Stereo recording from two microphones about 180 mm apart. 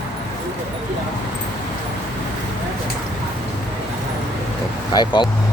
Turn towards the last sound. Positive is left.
turn(degrees=25)  # may be behind; listen again after turning